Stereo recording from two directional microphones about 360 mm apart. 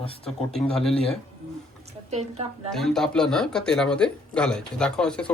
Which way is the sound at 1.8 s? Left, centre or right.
Centre.